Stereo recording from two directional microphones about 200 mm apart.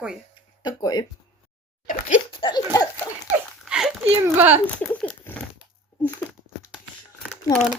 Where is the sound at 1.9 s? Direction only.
40° left (ahead or behind).